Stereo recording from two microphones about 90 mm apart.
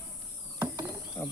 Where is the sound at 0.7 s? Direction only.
45° right (ahead or behind).